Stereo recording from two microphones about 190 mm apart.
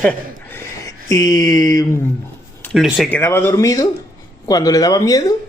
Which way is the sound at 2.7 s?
Centre (ahead or behind).